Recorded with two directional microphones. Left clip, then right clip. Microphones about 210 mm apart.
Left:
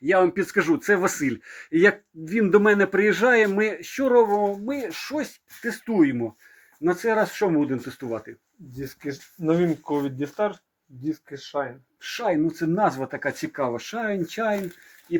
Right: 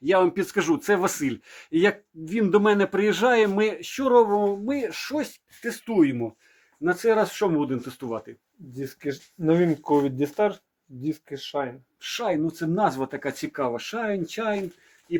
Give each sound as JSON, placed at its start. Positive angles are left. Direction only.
{"t": 0.0, "sound": "speech", "side_deg": -5}
{"t": 8.8, "sound": "speech", "side_deg": -25}
{"t": 9.4, "sound": "speech", "side_deg": -40}
{"t": 12.0, "sound": "speech", "side_deg": 0}